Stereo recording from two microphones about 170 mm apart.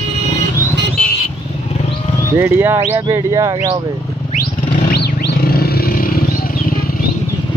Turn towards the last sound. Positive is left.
turn(degrees=60)  # may be behind; listen again after turning